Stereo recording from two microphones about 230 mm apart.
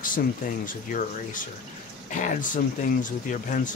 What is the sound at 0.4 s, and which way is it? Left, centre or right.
Speech, left.